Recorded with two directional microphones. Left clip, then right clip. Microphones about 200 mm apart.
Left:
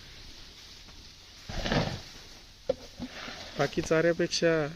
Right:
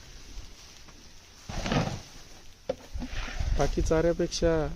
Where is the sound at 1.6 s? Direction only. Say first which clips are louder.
Even; 20° right (ahead or behind).